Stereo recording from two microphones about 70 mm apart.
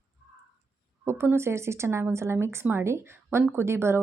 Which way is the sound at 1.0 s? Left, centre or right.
Right.